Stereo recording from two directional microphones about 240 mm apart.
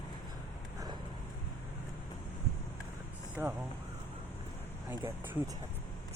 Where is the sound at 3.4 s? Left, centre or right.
Centre.